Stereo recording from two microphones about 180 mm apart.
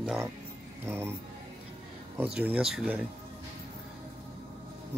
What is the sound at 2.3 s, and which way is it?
Speech, 5° right (ahead or behind).